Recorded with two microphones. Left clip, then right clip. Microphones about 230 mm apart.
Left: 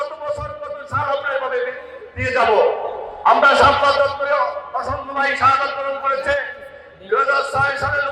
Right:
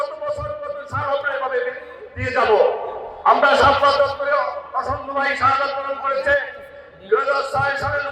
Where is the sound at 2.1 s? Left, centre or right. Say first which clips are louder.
Left 1 dB; left.